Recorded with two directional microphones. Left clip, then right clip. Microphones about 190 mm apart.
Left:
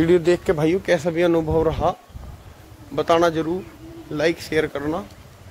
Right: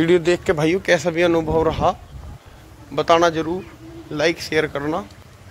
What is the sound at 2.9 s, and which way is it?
Speech, 20° left (ahead or behind).